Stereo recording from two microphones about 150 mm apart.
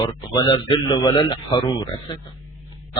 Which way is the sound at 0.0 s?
30° left (ahead or behind).